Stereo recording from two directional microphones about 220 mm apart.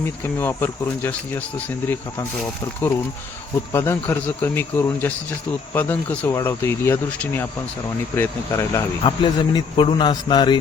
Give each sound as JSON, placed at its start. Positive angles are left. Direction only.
{"t": 0.0, "sound": "speech", "side_deg": 10}
{"t": 3.7, "sound": "speech", "side_deg": 10}